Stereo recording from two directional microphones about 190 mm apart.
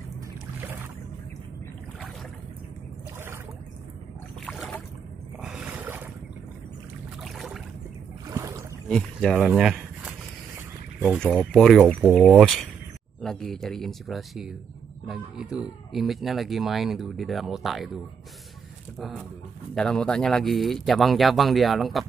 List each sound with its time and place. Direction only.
0.6 s boat: 10° right (ahead or behind)
4.5 s boat: centre (ahead or behind)
5.4 s a sound: 5° right (ahead or behind)
7.2 s boat: centre (ahead or behind)
8.3 s boat: 15° right (ahead or behind)
8.8 s a sound: centre (ahead or behind)
11.1 s speech: 5° left (ahead or behind)
18.9 s speech: centre (ahead or behind)